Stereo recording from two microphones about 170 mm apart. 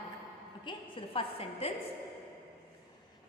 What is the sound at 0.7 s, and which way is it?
A woman's voice, 30° left (ahead or behind).